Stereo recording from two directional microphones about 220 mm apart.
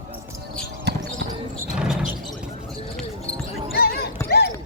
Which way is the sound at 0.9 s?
50° right (ahead or behind).